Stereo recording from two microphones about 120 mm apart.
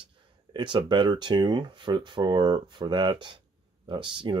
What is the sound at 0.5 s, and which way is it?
Speech, 40° right (ahead or behind).